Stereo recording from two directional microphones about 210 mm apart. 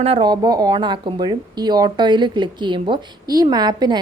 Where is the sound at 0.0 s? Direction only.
25° right (ahead or behind).